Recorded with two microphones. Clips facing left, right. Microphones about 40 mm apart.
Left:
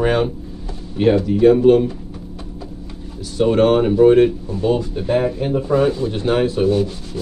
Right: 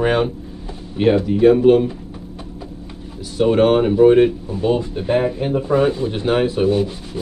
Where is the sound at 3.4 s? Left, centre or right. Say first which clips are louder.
Even; centre.